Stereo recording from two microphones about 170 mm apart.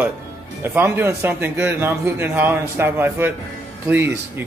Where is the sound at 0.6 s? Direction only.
15° right (ahead or behind).